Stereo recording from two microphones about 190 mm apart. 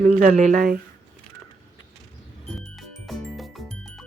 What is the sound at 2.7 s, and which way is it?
Music, centre (ahead or behind).